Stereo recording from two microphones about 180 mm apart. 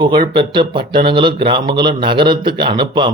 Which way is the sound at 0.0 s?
25° right (ahead or behind).